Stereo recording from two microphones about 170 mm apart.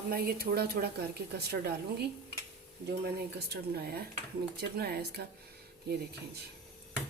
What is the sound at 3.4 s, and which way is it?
Speech, 65° right (ahead or behind).